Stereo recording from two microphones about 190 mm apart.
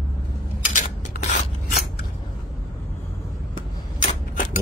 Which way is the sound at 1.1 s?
50° left (ahead or behind).